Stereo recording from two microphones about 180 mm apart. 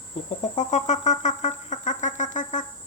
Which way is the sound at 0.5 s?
40° left (ahead or behind).